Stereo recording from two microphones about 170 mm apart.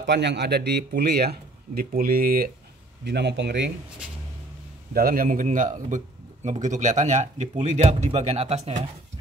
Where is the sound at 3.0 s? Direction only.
85° right.